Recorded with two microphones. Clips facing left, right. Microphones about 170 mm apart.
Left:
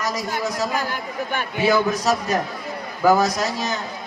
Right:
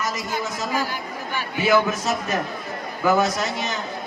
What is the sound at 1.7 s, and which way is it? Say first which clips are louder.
A man's voice: even; 35° left (ahead or behind).